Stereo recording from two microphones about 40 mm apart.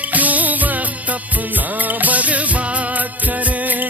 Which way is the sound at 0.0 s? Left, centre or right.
Right.